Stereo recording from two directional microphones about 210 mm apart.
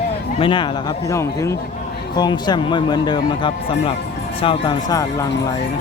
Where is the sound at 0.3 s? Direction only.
25° left (ahead or behind).